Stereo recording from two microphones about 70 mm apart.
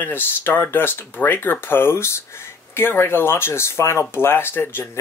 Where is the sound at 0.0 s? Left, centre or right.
Left.